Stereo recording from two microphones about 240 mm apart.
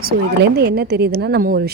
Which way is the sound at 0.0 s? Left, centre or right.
Right.